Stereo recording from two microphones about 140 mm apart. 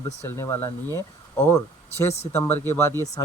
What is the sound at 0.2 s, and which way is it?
A man's voice, 20° left (ahead or behind).